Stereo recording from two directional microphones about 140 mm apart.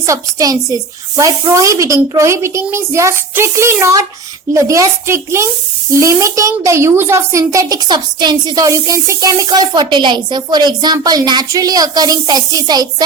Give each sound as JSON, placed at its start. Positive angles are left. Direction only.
{"t": 0.0, "sound": "speech", "side_deg": -25}